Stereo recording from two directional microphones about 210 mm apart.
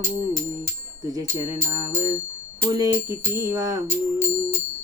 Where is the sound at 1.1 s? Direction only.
15° right (ahead or behind).